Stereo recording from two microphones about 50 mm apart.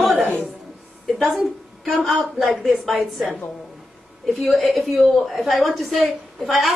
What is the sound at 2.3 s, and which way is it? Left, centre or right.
Speech, centre.